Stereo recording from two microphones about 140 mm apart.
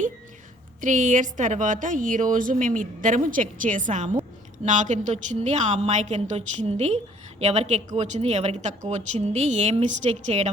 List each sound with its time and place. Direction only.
0.8 s a woman's voice: 60° right (ahead or behind)